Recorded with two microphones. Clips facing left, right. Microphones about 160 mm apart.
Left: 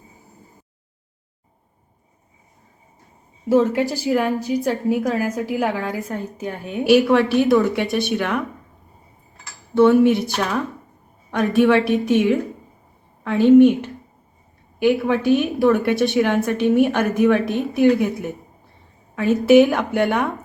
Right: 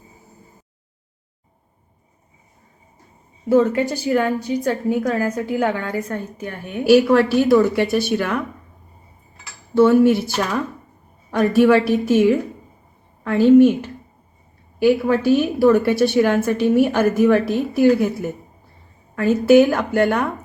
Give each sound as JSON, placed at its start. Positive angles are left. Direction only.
{"t": 3.6, "sound": "a woman's voice", "side_deg": 5}
{"t": 4.9, "sound": "a woman's voice", "side_deg": 15}
{"t": 5.8, "sound": "a woman's voice", "side_deg": 20}
{"t": 6.8, "sound": "a woman's voice", "side_deg": 0}
{"t": 9.7, "sound": "a woman's voice", "side_deg": 0}
{"t": 14.8, "sound": "a woman's voice", "side_deg": 0}